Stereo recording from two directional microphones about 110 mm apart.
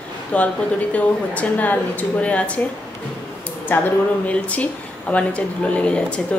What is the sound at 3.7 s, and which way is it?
Speech, 20° left (ahead or behind).